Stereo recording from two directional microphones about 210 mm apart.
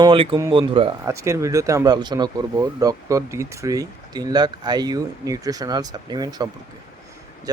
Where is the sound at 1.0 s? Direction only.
15° right (ahead or behind).